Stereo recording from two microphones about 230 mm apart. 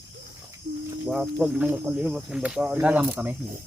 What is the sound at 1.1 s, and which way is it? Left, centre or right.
Speech, centre.